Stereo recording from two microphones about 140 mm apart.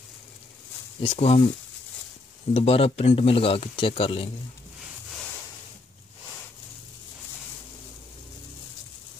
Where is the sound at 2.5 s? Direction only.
45° left (ahead or behind).